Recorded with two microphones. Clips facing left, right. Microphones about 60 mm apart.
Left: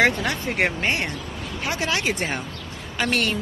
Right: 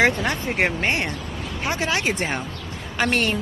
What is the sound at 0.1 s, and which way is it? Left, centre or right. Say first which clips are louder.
Speech: right 1 dB; right.